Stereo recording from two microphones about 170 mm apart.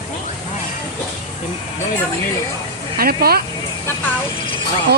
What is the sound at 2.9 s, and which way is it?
Speech, 60° right (ahead or behind).